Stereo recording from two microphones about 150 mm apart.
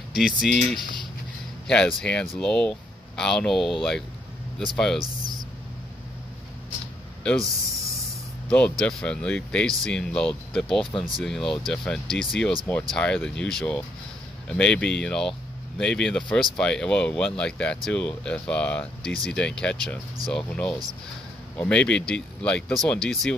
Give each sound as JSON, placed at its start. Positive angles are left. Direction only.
{"t": 0.1, "sound": "speech", "side_deg": 0}
{"t": 5.0, "sound": "speech", "side_deg": -25}
{"t": 8.5, "sound": "speech", "side_deg": 10}